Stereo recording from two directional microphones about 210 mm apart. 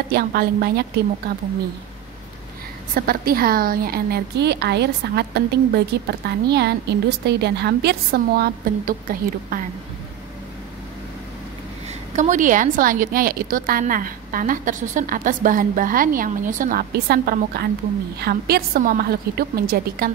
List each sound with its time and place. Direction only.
0.1 s a woman's voice: 45° right (ahead or behind)
2.9 s a woman's voice: 45° right (ahead or behind)
12.2 s a woman's voice: 35° right (ahead or behind)